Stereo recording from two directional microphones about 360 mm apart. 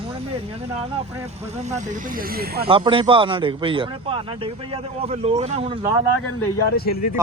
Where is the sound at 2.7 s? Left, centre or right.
Centre.